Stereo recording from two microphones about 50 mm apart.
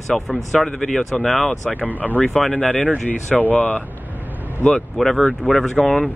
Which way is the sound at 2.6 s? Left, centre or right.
Left.